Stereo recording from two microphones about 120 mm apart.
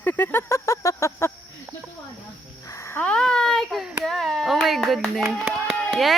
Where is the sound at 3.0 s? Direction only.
10° left (ahead or behind).